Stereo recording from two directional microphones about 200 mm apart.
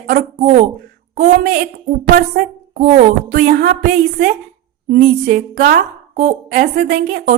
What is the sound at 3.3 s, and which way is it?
Music, 55° right (ahead or behind).